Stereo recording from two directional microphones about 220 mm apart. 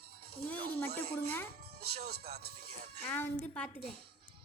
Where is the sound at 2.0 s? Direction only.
45° right (ahead or behind).